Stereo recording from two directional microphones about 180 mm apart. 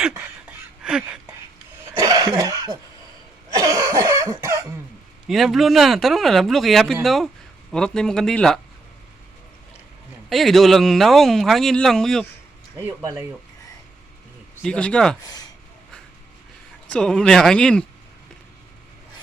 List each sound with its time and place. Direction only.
0.8 s speech: 5° right (ahead or behind)
1.9 s cough: 20° right (ahead or behind)
5.3 s speech: centre (ahead or behind)
10.2 s speech: centre (ahead or behind)
12.8 s speech: 15° right (ahead or behind)
14.5 s speech: 5° left (ahead or behind)
15.2 s speech: 20° left (ahead or behind)
16.9 s speech: 5° left (ahead or behind)